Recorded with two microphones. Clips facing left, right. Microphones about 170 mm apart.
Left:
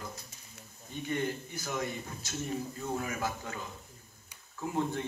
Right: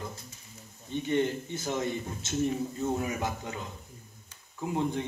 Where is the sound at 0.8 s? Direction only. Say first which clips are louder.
Right 6 dB; 25° right (ahead or behind).